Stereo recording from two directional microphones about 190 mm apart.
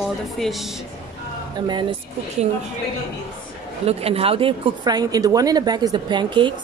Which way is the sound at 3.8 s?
30° right (ahead or behind).